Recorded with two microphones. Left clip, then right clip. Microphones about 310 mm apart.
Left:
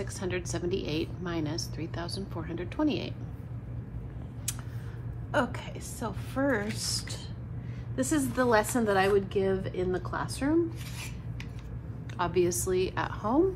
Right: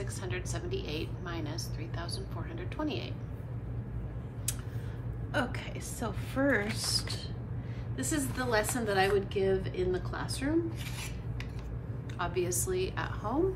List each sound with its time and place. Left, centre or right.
0.0 s a woman's voice: left
5.3 s a woman's voice: centre
7.9 s a woman's voice: centre
12.2 s a woman's voice: left